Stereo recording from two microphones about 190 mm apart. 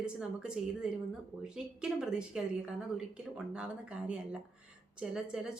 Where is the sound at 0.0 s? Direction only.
5° right (ahead or behind).